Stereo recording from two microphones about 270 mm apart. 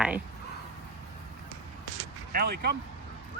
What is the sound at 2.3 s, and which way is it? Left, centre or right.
Speech, right.